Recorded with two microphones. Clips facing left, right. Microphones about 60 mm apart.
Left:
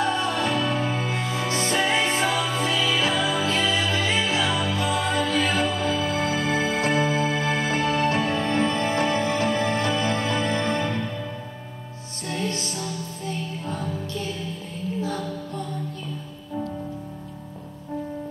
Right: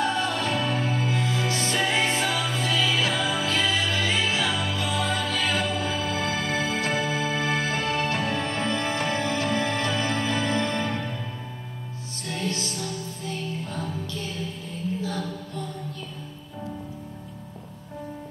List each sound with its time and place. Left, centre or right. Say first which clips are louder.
0.2 s music: left 2 dB; left
12.3 s music: left 2 dB; left
15.0 s music: left 2 dB; left